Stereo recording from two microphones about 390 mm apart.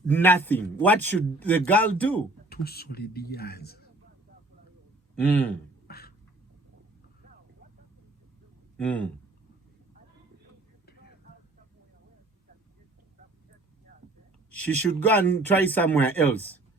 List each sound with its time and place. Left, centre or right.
0.1 s a man's voice: centre
2.5 s a man's voice: left
5.2 s a man's voice: centre
5.9 s a sound: left
8.8 s a man's voice: centre
14.5 s a man's voice: centre